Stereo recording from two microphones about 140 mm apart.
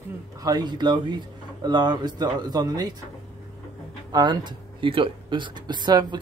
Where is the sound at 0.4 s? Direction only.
30° right (ahead or behind).